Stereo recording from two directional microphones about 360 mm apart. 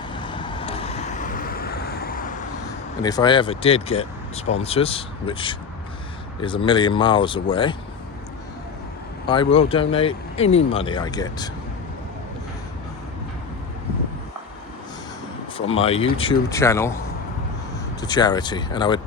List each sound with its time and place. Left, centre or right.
0.1 s vehicle: centre
3.0 s speech: centre
9.2 s speech: centre
15.5 s speech: centre
18.0 s speech: centre